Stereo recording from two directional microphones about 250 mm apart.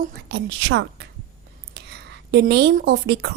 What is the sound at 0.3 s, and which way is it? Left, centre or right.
A woman's voice, right.